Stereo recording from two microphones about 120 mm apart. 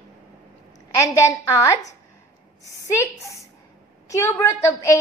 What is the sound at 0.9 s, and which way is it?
A woman's voice, 25° left (ahead or behind).